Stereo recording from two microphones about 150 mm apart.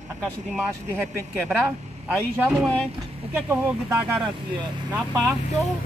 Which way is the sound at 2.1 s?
10° right (ahead or behind).